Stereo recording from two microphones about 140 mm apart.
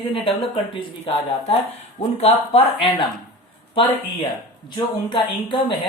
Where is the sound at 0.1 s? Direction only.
40° left (ahead or behind).